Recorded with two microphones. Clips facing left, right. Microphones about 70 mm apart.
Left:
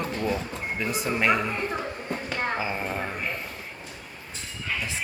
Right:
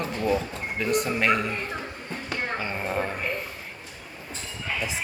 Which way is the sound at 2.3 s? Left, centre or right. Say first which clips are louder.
Left 1 dB; centre.